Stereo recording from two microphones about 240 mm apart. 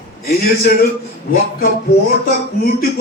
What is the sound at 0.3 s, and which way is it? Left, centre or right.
A man's voice, left.